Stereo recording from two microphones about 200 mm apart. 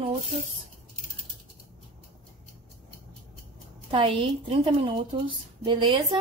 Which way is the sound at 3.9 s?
25° right (ahead or behind).